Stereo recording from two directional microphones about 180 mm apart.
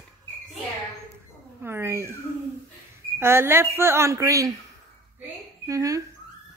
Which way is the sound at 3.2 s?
15° right (ahead or behind).